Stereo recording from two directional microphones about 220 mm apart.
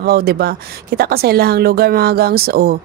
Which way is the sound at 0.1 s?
45° right (ahead or behind).